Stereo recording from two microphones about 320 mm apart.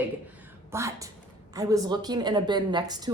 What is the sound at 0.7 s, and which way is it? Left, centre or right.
A woman's voice, centre.